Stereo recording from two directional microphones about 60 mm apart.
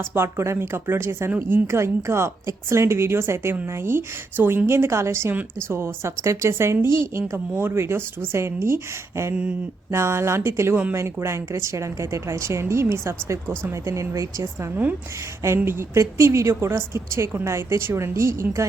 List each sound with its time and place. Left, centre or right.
0.0 s a woman's voice: right
9.3 s a sound: right
9.9 s a woman's voice: right
13.8 s speech: right
15.4 s a woman's voice: right